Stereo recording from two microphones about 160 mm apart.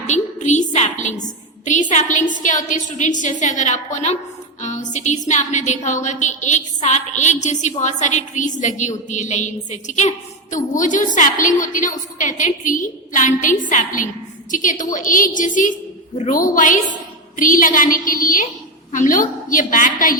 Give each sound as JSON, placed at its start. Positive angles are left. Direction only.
{"t": 0.1, "sound": "a woman's voice", "side_deg": 50}